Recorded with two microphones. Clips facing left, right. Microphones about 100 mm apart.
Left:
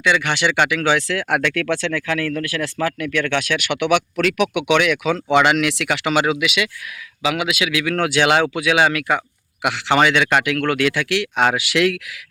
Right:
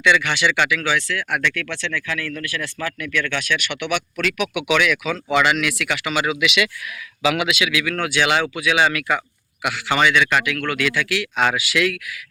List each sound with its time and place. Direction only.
0.2 s speech: 55° left (ahead or behind); by 1.6 s 90° left
2.0 s speech: 65° left (ahead or behind)
6.4 s speech: 35° left (ahead or behind)
7.5 s speech: 45° left (ahead or behind)
8.0 s speech: 55° left (ahead or behind)